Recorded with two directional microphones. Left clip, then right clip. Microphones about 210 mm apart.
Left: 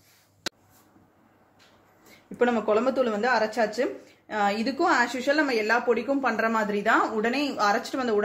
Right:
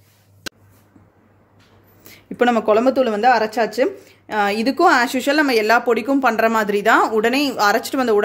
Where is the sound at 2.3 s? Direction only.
55° right (ahead or behind).